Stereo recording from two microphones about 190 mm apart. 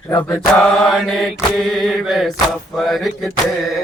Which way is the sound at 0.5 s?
5° left (ahead or behind).